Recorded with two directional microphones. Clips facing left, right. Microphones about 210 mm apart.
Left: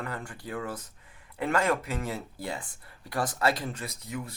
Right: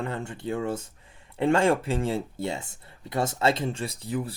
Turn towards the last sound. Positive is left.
turn(degrees=-30)  # may be behind; listen again after turning